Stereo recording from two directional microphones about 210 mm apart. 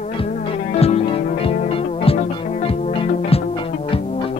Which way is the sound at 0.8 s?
30° left (ahead or behind).